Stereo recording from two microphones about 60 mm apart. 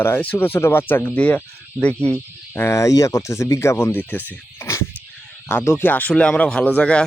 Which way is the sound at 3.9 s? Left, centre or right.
Left.